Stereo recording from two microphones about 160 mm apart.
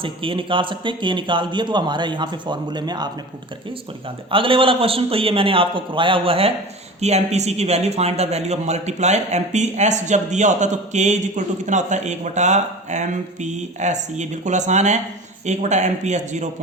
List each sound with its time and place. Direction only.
0.0 s a man's voice: 35° right (ahead or behind)
4.3 s a man's voice: 35° right (ahead or behind)